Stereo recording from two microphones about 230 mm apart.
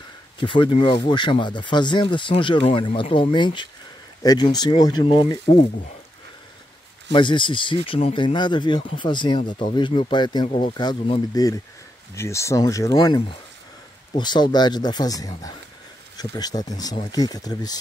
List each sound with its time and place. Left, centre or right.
0.4 s speech: left
7.1 s speech: left